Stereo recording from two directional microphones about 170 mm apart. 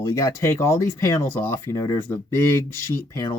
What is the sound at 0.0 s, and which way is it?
Speech, 20° left (ahead or behind).